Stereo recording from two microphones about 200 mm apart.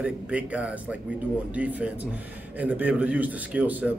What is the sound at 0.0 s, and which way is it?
A man's voice, 5° right (ahead or behind).